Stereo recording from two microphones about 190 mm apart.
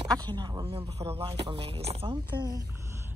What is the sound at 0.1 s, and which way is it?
A woman's voice, 25° right (ahead or behind).